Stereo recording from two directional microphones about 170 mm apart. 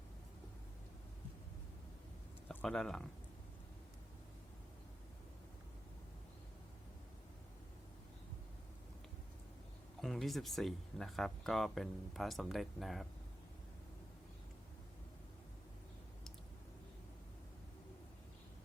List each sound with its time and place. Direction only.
2.5 s speech: 5° left (ahead or behind)
10.0 s speech: centre (ahead or behind)